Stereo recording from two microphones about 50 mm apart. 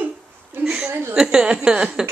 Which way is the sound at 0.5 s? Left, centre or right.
Right.